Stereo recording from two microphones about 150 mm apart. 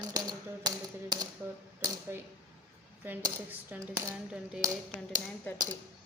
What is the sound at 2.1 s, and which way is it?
Speech, 15° right (ahead or behind).